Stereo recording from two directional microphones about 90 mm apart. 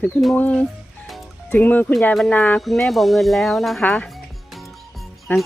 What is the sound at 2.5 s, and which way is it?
Music, 5° left (ahead or behind).